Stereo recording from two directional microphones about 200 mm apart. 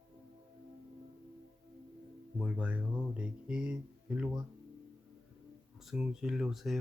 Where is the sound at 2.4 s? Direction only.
5° right (ahead or behind).